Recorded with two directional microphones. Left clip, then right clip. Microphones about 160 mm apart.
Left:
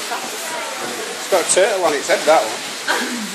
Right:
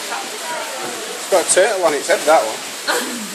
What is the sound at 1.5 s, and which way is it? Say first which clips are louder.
Speech: right 1 dB; 20° right (ahead or behind).